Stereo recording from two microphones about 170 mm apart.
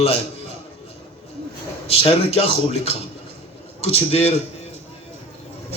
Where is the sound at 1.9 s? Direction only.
35° left (ahead or behind).